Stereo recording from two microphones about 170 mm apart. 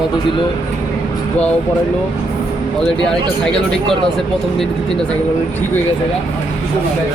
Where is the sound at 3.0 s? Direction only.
5° left (ahead or behind).